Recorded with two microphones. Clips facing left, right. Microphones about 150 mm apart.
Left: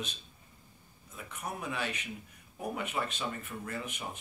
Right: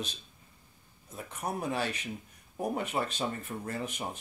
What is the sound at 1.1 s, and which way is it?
Speech, 35° right (ahead or behind).